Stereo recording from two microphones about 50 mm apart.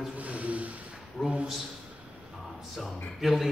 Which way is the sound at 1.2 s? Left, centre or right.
Centre.